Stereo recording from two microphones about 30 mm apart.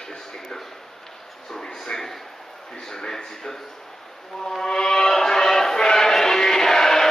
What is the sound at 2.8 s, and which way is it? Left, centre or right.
Speech, centre.